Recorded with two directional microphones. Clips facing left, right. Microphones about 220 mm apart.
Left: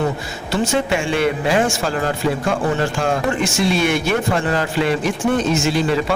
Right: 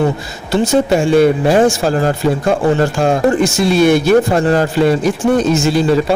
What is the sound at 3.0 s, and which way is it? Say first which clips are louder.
Speech: right 7 dB; 40° right (ahead or behind).